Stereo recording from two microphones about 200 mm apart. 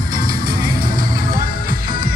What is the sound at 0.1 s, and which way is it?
Music, 45° right (ahead or behind).